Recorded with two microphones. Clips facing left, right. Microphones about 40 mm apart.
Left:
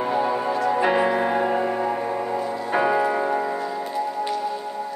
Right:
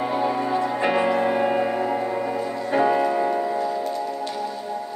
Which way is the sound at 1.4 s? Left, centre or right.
Centre.